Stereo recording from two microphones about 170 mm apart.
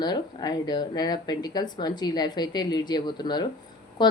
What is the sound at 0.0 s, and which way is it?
Speech, 25° left (ahead or behind).